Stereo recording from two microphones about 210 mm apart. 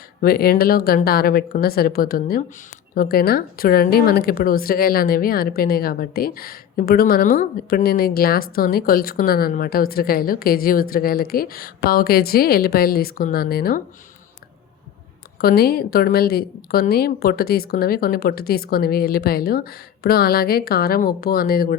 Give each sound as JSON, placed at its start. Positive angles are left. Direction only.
{"t": 0.2, "sound": "a woman's voice", "side_deg": 45}
{"t": 15.4, "sound": "a woman's voice", "side_deg": 45}